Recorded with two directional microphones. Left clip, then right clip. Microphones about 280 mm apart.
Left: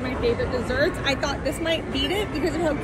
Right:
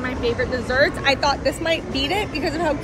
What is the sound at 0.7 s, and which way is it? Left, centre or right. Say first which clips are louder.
Speech: right 6 dB; right.